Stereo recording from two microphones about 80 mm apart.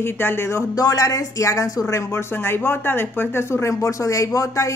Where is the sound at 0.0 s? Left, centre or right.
Left.